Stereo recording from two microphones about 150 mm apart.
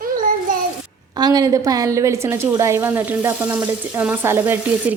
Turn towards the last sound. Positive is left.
turn(degrees=-10)  # may be behind; listen again after turning